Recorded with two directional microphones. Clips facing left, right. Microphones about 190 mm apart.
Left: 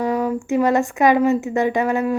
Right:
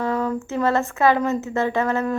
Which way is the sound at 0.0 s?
15° left (ahead or behind).